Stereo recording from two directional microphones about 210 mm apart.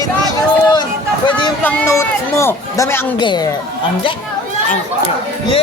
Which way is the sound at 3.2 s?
20° left (ahead or behind).